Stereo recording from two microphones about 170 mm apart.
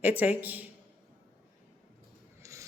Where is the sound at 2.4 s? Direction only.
20° right (ahead or behind).